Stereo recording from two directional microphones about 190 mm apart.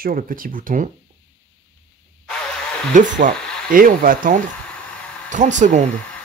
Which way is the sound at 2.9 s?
40° right (ahead or behind).